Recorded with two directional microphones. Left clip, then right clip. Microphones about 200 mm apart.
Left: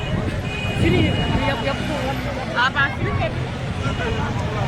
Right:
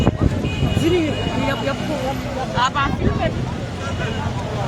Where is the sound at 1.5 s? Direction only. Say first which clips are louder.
Right 1 dB; 60° right (ahead or behind).